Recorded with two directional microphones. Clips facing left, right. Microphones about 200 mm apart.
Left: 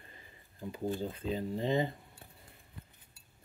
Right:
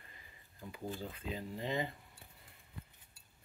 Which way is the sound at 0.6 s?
30° left (ahead or behind).